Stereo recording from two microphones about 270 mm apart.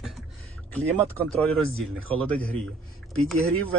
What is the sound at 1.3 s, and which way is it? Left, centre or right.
Speech, centre.